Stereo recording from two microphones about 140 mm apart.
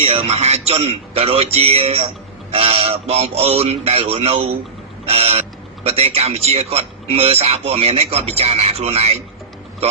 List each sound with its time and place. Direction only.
0.0 s speech: 50° right (ahead or behind)